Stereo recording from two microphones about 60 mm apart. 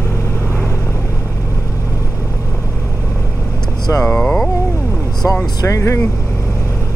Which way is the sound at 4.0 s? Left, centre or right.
Centre.